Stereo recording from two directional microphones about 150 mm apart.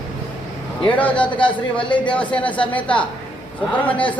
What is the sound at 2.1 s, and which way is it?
A man's voice, 10° left (ahead or behind).